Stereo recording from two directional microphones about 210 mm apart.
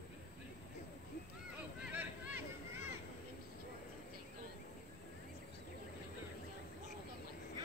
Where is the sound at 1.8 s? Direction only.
10° right (ahead or behind).